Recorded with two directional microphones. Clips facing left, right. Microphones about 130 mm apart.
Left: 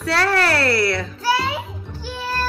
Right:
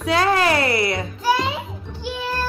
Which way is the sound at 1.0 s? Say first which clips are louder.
Right 1 dB; 15° right (ahead or behind).